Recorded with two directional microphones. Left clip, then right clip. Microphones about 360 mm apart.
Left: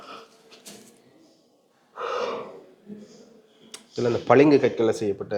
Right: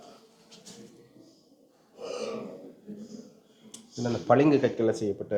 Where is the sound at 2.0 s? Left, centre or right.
Centre.